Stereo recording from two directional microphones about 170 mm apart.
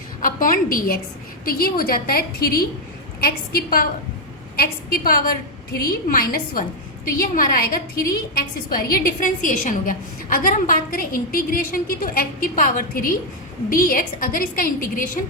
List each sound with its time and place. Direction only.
0.2 s a woman's voice: 55° left (ahead or behind)